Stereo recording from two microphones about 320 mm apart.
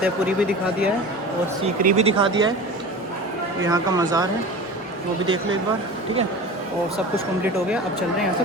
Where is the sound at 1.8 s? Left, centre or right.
Right.